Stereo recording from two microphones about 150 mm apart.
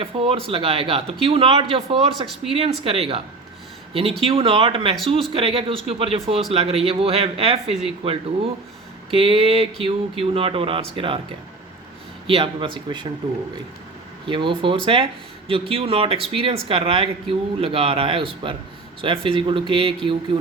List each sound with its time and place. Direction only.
0.0 s speech: 40° right (ahead or behind)
12.3 s speech: 35° right (ahead or behind)
14.3 s speech: 35° right (ahead or behind)